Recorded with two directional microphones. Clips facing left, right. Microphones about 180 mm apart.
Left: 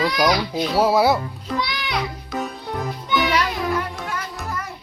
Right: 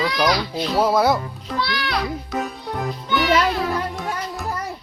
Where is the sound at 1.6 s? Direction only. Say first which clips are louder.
Right 2 dB; 15° left (ahead or behind).